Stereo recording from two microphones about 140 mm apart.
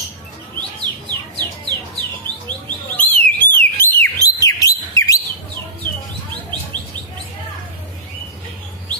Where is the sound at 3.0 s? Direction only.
10° left (ahead or behind).